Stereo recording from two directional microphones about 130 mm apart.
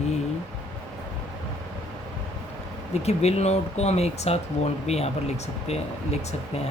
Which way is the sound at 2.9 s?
55° left (ahead or behind).